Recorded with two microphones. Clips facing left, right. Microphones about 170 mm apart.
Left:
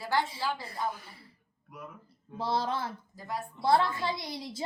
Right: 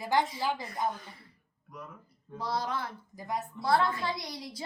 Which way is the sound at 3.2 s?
20° right (ahead or behind).